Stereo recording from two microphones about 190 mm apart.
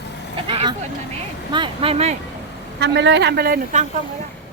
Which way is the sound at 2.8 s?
65° right (ahead or behind).